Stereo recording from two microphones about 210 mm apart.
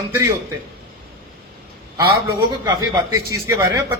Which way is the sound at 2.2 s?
15° right (ahead or behind).